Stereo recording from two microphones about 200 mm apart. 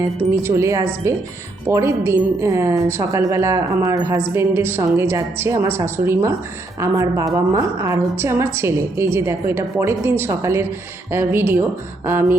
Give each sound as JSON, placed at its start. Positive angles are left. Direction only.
{"t": 0.4, "sound": "a woman's voice", "side_deg": -15}